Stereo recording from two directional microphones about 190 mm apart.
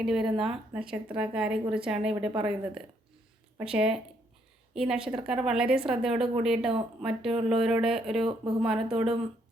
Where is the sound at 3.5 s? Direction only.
5° right (ahead or behind).